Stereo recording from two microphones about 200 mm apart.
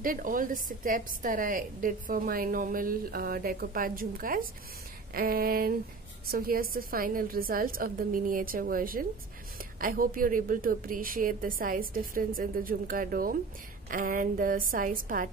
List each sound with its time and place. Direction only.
0.0 s a woman's voice: 45° right (ahead or behind)